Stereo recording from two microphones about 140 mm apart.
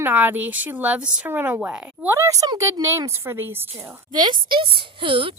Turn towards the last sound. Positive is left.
turn(degrees=-35)  # may be behind; listen again after turning